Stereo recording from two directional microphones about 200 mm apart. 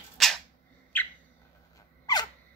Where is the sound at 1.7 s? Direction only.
20° left (ahead or behind).